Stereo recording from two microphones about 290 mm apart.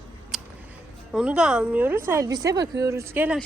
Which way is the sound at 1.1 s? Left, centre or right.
Centre.